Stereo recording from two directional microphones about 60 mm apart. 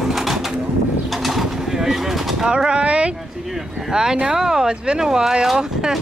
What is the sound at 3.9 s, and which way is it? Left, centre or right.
Speech, centre.